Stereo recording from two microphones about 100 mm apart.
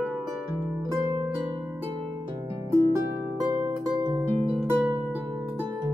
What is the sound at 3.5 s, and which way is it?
Music, 45° right (ahead or behind).